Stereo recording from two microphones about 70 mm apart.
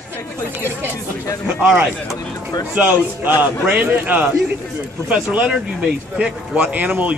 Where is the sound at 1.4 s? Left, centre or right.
Centre.